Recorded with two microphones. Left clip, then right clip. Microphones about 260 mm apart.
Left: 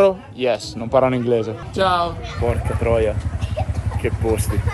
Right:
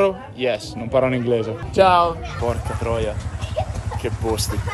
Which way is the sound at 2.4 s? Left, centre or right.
Centre.